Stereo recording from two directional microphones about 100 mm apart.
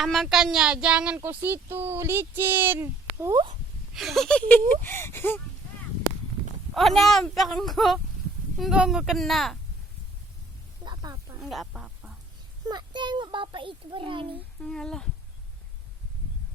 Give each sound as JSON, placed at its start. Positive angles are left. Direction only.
{"t": 0.0, "sound": "speech", "side_deg": 0}
{"t": 3.9, "sound": "speech", "side_deg": 0}
{"t": 6.7, "sound": "speech", "side_deg": 0}
{"t": 10.8, "sound": "snake", "side_deg": -40}
{"t": 11.3, "sound": "speech", "side_deg": 0}
{"t": 12.6, "sound": "a child's voice", "side_deg": -50}
{"t": 14.6, "sound": "speech", "side_deg": 5}